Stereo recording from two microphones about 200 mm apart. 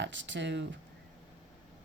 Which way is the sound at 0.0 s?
65° right (ahead or behind).